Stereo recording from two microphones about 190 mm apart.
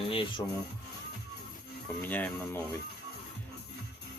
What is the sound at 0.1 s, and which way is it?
Music, 30° left (ahead or behind).